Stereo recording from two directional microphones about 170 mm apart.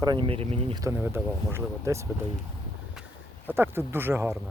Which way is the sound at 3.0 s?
Centre (ahead or behind).